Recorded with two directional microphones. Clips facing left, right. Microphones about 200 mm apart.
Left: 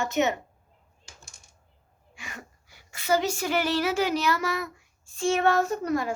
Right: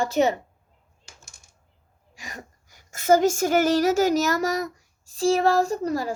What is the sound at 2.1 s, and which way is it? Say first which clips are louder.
A woman's voice: right 3 dB; 35° right (ahead or behind).